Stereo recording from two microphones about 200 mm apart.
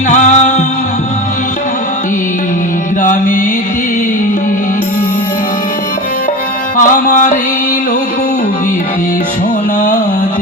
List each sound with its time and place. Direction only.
0.1 s music: 35° left (ahead or behind)
3.0 s music: 40° left (ahead or behind)
6.7 s music: 40° left (ahead or behind)